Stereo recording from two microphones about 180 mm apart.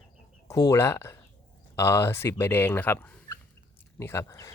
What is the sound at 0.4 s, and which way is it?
Speech, 20° left (ahead or behind).